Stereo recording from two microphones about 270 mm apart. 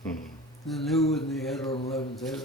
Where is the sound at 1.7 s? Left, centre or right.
Left.